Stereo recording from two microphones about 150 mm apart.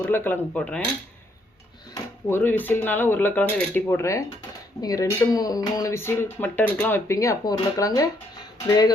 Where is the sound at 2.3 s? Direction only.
15° left (ahead or behind).